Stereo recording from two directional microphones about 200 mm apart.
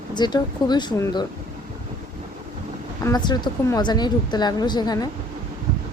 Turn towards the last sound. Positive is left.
turn(degrees=20)  # may be behind; listen again after turning